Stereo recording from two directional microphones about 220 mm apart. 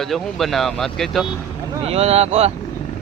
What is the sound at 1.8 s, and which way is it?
Speech, 30° right (ahead or behind).